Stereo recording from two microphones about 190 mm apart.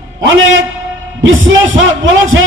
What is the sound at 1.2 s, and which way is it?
A man's voice, 90° right.